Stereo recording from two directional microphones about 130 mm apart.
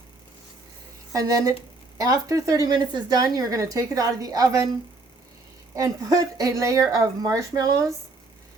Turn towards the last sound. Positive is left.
turn(degrees=-25)  # may be behind; listen again after turning